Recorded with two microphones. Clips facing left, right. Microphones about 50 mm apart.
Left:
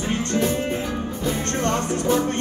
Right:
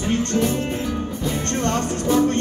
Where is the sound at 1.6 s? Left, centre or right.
Left.